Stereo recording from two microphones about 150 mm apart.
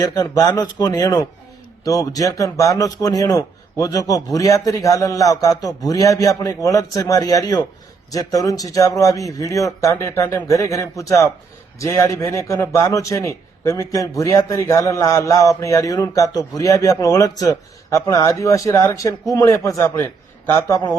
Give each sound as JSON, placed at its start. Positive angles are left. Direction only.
{"t": 0.0, "sound": "a man's voice", "side_deg": 25}